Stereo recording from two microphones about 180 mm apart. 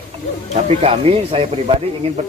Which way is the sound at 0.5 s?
35° right (ahead or behind).